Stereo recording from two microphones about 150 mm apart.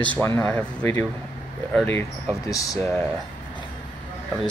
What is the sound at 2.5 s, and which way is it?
Speech, 25° left (ahead or behind).